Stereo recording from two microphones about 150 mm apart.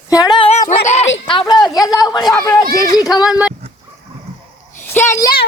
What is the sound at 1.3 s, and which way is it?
A woman's voice, 30° left (ahead or behind).